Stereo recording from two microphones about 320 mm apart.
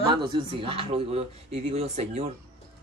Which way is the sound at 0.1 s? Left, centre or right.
Centre.